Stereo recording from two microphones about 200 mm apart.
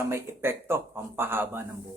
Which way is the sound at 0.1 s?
10° right (ahead or behind).